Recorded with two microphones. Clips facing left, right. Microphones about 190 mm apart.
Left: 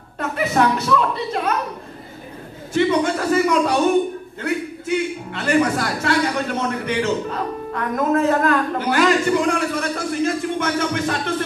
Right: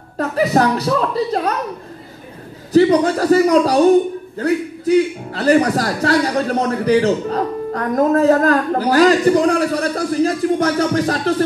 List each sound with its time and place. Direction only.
0.2 s a man's voice: 35° right (ahead or behind)
2.7 s a man's voice: 35° right (ahead or behind)